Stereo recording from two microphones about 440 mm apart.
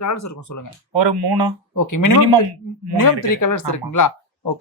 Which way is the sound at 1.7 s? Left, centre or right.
Left.